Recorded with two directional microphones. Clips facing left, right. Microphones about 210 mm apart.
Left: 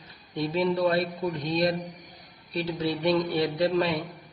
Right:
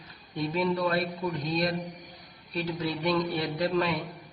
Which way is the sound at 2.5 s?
30° left (ahead or behind).